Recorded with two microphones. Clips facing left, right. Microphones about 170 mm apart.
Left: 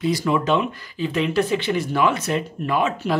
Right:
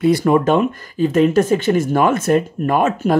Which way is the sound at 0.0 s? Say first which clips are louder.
Right 7 dB; 55° right (ahead or behind).